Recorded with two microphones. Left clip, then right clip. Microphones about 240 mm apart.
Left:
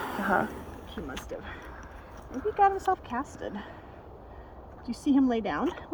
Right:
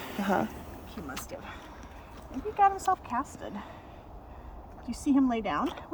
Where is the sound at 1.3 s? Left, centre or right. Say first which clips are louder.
Left 2 dB; right.